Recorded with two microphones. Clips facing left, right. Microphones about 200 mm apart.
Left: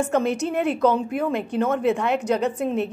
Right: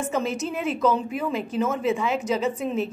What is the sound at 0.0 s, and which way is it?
A woman's voice, 60° left (ahead or behind).